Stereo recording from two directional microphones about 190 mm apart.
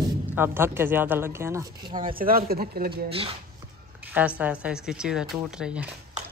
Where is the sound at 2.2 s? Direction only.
50° right (ahead or behind).